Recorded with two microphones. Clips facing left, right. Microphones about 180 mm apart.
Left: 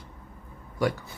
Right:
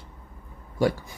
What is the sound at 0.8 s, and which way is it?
Speech, 30° right (ahead or behind).